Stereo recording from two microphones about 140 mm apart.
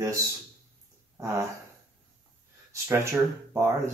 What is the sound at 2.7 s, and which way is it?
Speech, 20° right (ahead or behind).